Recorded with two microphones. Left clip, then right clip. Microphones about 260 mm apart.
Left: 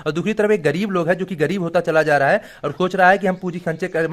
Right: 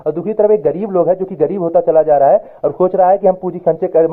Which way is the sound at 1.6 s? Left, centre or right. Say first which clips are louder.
Right 7 dB; left.